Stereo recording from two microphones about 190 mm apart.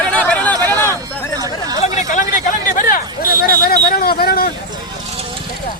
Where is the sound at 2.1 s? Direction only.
45° left (ahead or behind).